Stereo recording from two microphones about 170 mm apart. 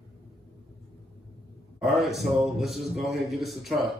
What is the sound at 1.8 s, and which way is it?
A man's voice, centre (ahead or behind).